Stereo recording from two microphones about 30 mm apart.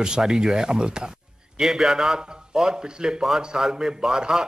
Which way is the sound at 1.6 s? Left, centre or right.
Centre.